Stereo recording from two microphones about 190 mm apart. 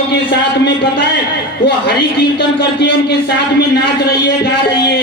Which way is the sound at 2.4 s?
60° left (ahead or behind).